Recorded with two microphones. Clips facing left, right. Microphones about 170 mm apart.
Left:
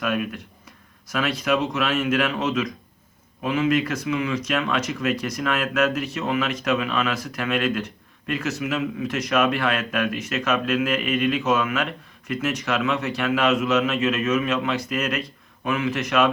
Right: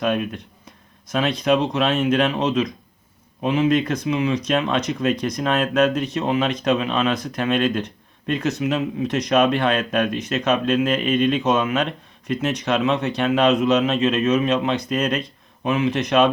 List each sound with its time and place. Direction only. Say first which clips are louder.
0.0 s speech: right 3 dB; 30° right (ahead or behind)